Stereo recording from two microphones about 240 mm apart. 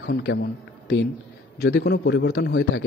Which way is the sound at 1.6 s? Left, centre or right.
Left.